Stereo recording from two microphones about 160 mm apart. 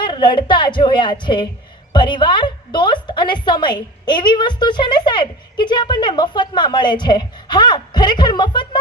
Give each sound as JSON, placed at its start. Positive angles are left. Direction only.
{"t": 0.0, "sound": "a woman's voice", "side_deg": 30}